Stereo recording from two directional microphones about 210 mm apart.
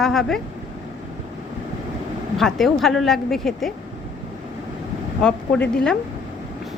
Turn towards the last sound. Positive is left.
turn(degrees=5)  # may be behind; listen again after turning